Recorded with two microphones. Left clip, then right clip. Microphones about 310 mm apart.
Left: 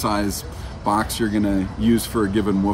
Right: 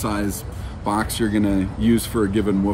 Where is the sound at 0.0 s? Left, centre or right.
Centre.